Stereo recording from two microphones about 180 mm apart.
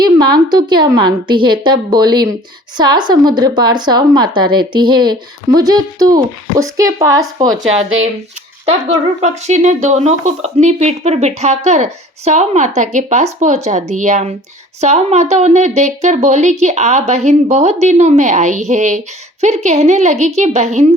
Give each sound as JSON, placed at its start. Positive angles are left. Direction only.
{"t": 0.0, "sound": "a woman's voice", "side_deg": -25}
{"t": 9.2, "sound": "a woman's voice", "side_deg": -40}